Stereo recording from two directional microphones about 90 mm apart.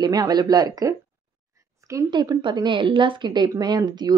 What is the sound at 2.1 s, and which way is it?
Speech, 55° right (ahead or behind).